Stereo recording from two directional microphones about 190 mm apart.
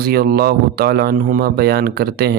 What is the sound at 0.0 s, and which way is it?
A man's voice, 55° right (ahead or behind).